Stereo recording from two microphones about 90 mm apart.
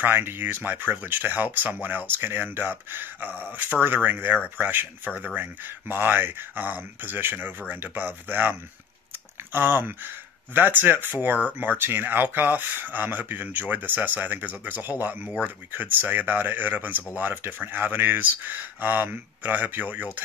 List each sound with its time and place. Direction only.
0.0 s speech: 25° right (ahead or behind)